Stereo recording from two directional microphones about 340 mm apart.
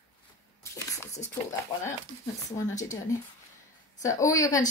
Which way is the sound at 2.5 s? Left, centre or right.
Centre.